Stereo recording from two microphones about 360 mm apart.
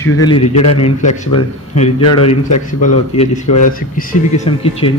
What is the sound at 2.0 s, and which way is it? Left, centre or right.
Speech, left.